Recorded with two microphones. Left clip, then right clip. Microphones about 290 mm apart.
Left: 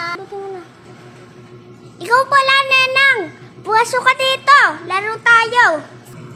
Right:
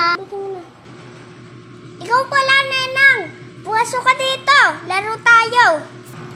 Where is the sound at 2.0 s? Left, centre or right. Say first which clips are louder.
Left 3 dB; left.